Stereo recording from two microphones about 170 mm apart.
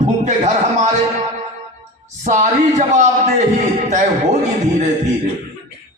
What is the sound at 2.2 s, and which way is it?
A man's voice, 45° right (ahead or behind).